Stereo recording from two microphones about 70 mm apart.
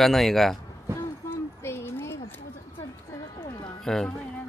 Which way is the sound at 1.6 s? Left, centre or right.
Left.